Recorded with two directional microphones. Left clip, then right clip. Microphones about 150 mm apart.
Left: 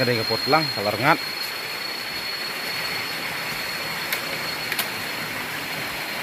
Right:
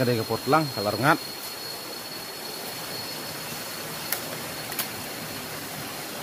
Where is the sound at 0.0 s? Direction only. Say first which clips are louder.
Left 4 dB; 25° right (ahead or behind).